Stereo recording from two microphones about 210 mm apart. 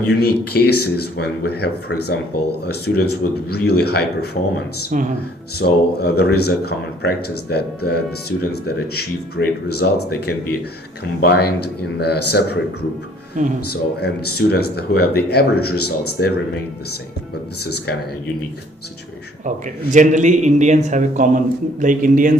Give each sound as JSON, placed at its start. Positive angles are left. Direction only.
{"t": 0.2, "sound": "speech", "side_deg": 50}
{"t": 4.9, "sound": "a man's voice", "side_deg": -40}
{"t": 5.5, "sound": "speech", "side_deg": 50}
{"t": 13.7, "sound": "speech", "side_deg": 50}
{"t": 17.6, "sound": "speech", "side_deg": 50}
{"t": 19.9, "sound": "a man's voice", "side_deg": -35}